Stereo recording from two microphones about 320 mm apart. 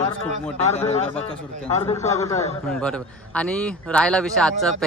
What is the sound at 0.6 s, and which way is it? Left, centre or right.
A man's voice, centre.